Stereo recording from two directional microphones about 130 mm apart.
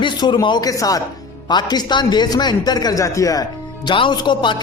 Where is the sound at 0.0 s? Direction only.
35° left (ahead or behind).